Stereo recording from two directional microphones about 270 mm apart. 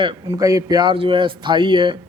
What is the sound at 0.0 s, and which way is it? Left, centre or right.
A man's voice, centre.